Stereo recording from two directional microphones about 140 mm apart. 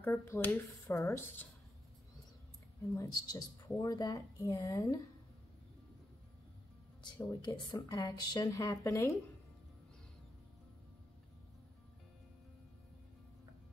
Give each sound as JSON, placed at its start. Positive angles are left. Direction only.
{"t": 0.0, "sound": "speech", "side_deg": 15}
{"t": 3.0, "sound": "a woman's voice", "side_deg": 25}
{"t": 7.2, "sound": "a woman's voice", "side_deg": 25}